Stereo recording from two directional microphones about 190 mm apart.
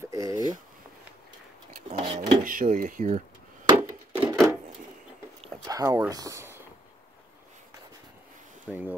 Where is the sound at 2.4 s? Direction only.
45° right (ahead or behind).